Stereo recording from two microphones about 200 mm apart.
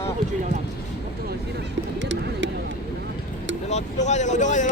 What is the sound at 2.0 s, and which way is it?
Bird, 65° right (ahead or behind).